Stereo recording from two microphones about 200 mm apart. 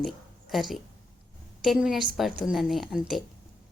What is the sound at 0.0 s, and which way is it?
Speech, centre (ahead or behind).